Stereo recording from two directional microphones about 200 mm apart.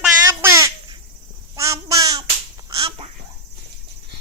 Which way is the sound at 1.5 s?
15° right (ahead or behind).